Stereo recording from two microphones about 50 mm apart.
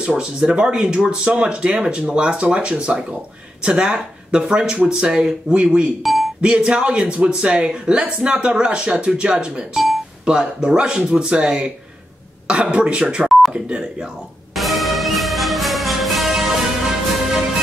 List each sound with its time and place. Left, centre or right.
0.0 s speech: right
12.7 s speech: centre
14.5 s music: centre